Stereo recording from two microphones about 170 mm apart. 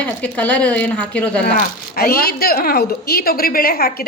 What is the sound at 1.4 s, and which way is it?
Speech, 65° left (ahead or behind).